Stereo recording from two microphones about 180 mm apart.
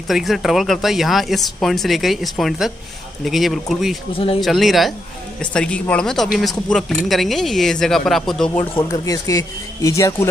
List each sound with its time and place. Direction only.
0.1 s speech: centre (ahead or behind)
4.1 s speech: 30° left (ahead or behind)
4.4 s speech: centre (ahead or behind)
8.9 s speech: 20° left (ahead or behind)